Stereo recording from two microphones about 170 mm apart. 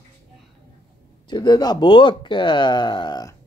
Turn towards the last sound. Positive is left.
turn(degrees=25)  # may be behind; listen again after turning